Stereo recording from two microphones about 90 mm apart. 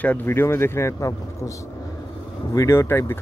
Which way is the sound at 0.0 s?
20° left (ahead or behind).